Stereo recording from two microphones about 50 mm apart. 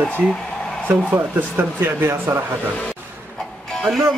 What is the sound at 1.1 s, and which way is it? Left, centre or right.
Speech, right.